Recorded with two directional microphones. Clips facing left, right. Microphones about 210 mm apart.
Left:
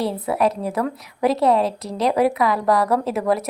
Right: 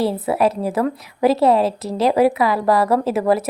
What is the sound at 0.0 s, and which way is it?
A woman's voice, 5° right (ahead or behind).